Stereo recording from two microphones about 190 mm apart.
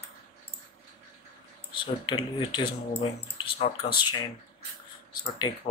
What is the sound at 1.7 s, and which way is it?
Speech, 25° left (ahead or behind).